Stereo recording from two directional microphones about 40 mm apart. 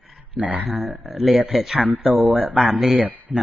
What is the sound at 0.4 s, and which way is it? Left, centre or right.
Speech, right.